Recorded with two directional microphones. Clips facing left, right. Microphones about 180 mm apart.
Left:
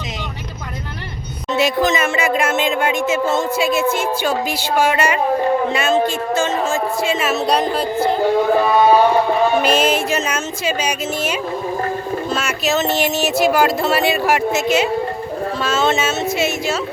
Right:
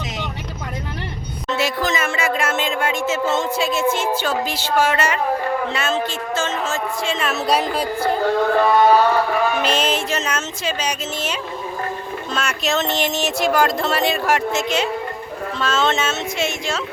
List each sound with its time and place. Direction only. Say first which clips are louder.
1.5 s music: left 5 dB; 20° left (ahead or behind); by 7.6 s centre (ahead or behind)
8.2 s music: left 1 dB; 15° left (ahead or behind)
9.6 s music: left 4 dB; 10° left (ahead or behind)